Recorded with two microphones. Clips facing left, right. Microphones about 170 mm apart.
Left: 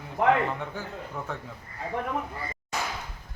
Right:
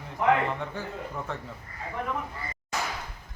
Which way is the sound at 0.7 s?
Centre (ahead or behind).